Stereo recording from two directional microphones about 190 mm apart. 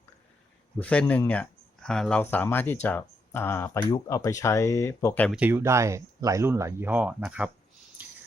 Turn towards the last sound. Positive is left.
turn(degrees=-10)  # may be behind; listen again after turning